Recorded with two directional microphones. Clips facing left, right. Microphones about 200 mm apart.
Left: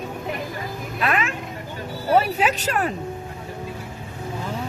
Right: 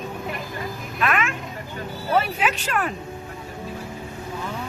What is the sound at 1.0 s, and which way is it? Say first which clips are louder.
Vehicle: even; 35° left (ahead or behind).